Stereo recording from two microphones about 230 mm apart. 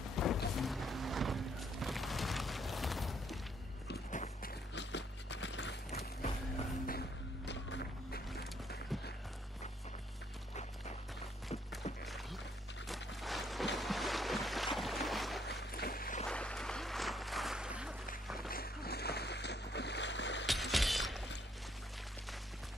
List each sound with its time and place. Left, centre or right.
0.1 s music: centre
3.9 s walk: left
4.7 s music: left
6.9 s music: left
12.0 s music: centre
13.2 s a sound: centre
13.7 s boat: centre
14.8 s music: centre
15.4 s boat: left
16.3 s a sound: centre
18.5 s a sound: left
20.7 s shatter: centre